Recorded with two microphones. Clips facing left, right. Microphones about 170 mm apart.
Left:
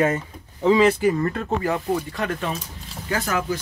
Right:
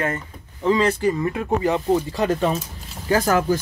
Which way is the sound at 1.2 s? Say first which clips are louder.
Right 2 dB; 10° right (ahead or behind).